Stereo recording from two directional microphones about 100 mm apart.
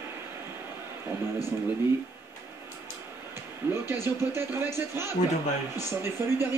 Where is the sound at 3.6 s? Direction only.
20° right (ahead or behind).